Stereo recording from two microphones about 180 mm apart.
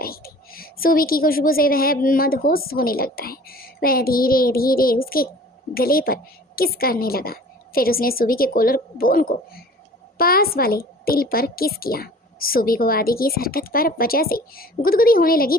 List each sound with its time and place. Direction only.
0.0 s a woman's voice: 55° left (ahead or behind)